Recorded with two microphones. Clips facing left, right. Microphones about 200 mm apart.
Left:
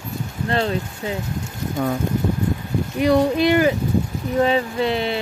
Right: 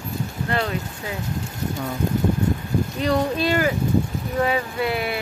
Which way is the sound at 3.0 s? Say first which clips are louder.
Left 7 dB; 15° left (ahead or behind).